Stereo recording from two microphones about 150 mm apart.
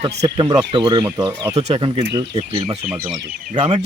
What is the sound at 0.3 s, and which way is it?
Speech, 30° right (ahead or behind).